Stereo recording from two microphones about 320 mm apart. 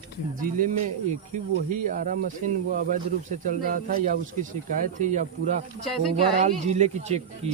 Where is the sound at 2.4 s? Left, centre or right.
Right.